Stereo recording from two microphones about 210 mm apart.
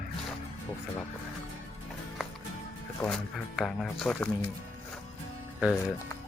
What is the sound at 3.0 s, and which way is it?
Speech, centre (ahead or behind).